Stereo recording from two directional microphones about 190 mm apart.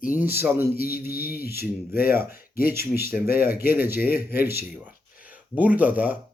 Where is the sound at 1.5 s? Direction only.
15° right (ahead or behind).